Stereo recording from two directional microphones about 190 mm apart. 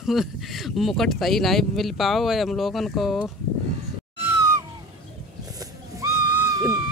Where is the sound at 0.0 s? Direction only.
Centre (ahead or behind).